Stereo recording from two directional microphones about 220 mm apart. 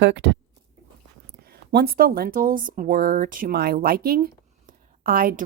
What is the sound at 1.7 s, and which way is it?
A woman's voice, 45° right (ahead or behind).